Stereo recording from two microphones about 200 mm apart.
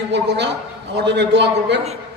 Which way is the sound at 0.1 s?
60° right (ahead or behind).